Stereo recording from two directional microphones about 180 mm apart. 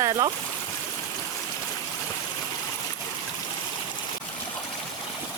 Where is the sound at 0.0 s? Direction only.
20° right (ahead or behind).